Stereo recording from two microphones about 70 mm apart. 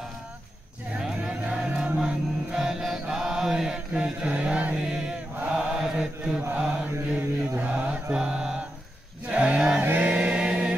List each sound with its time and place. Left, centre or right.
1.5 s chant: centre
6.5 s mantra: centre
9.3 s a sound: centre
9.8 s chant: right